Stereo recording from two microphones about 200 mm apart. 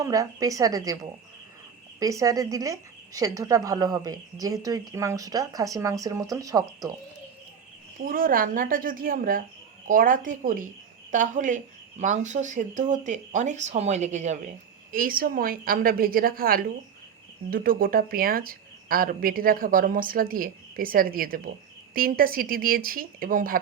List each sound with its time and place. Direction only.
0.0 s speech: 15° right (ahead or behind)
2.0 s speech: 15° right (ahead or behind)
8.0 s speech: 45° right (ahead or behind)